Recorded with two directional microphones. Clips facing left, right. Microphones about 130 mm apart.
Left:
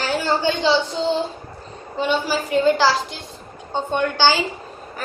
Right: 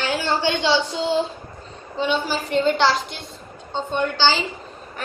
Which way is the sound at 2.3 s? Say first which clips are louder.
Left 3 dB; 5° left (ahead or behind).